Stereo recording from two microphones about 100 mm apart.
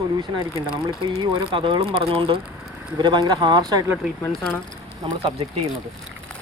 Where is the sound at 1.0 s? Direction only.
60° right (ahead or behind); by 3.9 s 45° right (ahead or behind).